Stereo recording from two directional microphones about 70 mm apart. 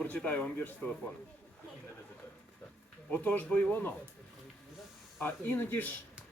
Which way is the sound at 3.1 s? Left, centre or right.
Left.